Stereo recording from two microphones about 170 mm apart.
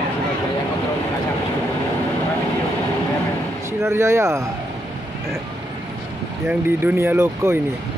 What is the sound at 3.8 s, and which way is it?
Speech, 15° right (ahead or behind).